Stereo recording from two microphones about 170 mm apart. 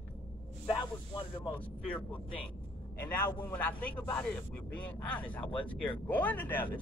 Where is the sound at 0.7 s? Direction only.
30° left (ahead or behind).